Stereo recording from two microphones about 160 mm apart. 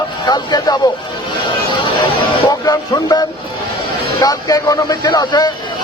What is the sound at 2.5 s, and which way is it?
Music, 25° left (ahead or behind).